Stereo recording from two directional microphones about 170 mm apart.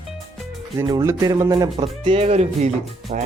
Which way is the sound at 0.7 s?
20° right (ahead or behind).